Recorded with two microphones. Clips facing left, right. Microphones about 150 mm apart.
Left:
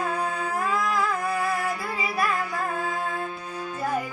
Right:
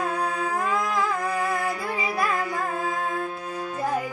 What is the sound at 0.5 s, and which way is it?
Music, 20° right (ahead or behind).